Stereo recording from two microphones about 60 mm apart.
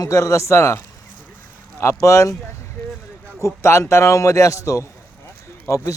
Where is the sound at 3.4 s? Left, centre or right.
Left.